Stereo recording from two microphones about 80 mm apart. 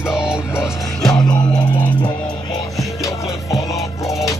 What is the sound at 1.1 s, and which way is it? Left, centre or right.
Music, left.